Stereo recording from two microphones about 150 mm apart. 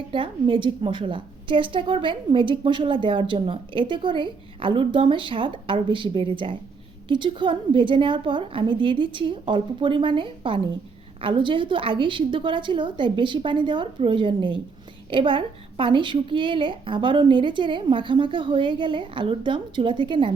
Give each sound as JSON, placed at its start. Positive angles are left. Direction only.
{"t": 0.1, "sound": "a woman's voice", "side_deg": -35}